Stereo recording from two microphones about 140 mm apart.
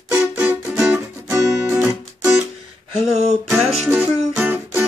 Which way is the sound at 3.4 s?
Centre (ahead or behind).